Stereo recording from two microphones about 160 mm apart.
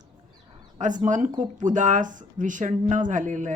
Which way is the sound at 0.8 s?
50° right (ahead or behind).